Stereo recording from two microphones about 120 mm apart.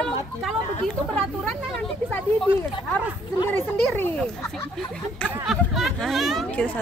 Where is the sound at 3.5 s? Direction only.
15° left (ahead or behind).